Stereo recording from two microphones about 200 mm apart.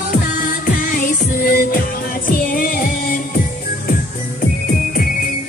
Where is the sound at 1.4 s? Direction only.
45° left (ahead or behind).